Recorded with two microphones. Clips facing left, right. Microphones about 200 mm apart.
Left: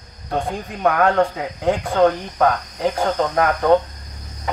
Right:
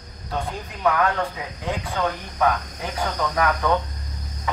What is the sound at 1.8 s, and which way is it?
Cricket, 55° left (ahead or behind).